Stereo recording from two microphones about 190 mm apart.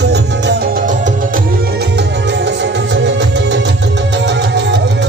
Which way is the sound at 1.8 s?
65° right (ahead or behind).